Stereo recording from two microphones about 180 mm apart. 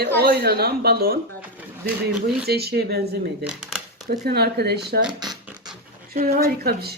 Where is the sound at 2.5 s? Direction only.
60° right (ahead or behind).